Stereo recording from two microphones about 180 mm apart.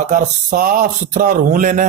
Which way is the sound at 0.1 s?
45° right (ahead or behind).